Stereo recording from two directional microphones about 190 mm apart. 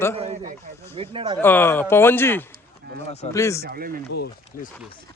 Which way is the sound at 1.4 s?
10° left (ahead or behind).